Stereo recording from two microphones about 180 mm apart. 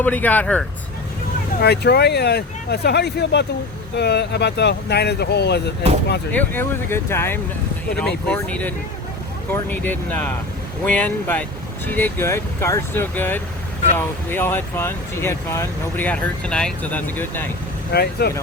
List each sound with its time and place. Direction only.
0.0 s speech: 10° left (ahead or behind)
1.6 s speech: 65° left (ahead or behind)
6.3 s speech: 10° left (ahead or behind)
17.9 s speech: 60° left (ahead or behind)